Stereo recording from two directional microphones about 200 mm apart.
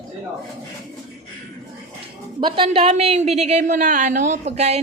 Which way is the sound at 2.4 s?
25° right (ahead or behind).